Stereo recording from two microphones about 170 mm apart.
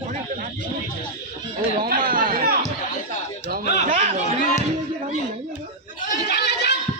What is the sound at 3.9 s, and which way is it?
Speech, 40° right (ahead or behind).